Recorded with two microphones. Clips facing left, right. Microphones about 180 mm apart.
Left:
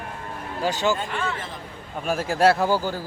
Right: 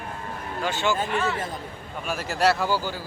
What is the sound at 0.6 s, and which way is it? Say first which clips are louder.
Speech: left 3 dB; 40° left (ahead or behind).